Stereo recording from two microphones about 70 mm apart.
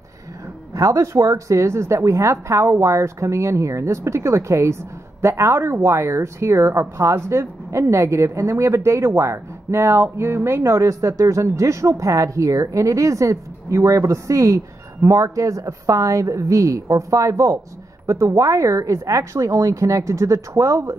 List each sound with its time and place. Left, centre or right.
0.7 s a woman's voice: right